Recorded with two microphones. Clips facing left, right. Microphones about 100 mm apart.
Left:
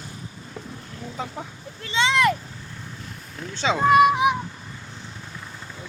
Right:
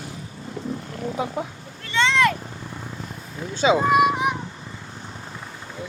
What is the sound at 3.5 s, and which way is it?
Speech, 10° right (ahead or behind).